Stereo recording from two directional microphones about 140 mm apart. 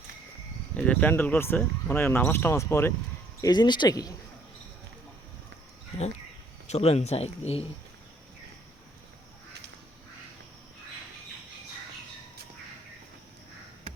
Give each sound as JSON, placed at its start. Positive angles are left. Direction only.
{"t": 0.7, "sound": "speech", "side_deg": 10}
{"t": 3.4, "sound": "speech", "side_deg": 30}
{"t": 6.7, "sound": "speech", "side_deg": 45}